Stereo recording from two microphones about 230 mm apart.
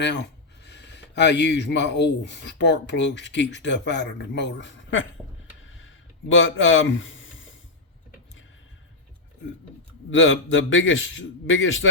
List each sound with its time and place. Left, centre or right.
0.0 s speech: left
5.6 s a sound: left
10.1 s a man's voice: left